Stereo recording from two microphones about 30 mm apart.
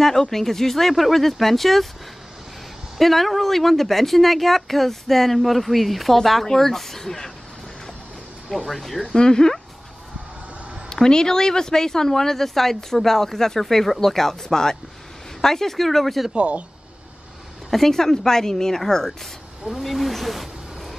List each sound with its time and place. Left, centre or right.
0.0 s speech: centre
3.0 s speech: centre
8.6 s speech: centre
9.1 s speech: left
10.9 s speech: left; by 16.3 s centre
16.3 s speech: right
17.6 s speech: centre
19.8 s speech: centre